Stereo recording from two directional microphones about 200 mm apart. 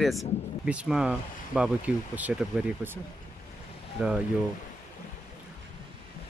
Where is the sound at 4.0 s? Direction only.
5° right (ahead or behind).